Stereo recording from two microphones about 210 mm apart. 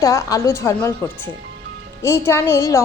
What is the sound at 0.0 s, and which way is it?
A woman's voice, 15° left (ahead or behind).